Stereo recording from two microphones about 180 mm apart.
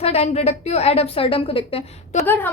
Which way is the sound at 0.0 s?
35° left (ahead or behind).